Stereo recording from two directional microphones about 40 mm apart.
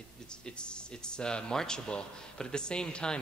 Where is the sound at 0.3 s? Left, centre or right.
Left.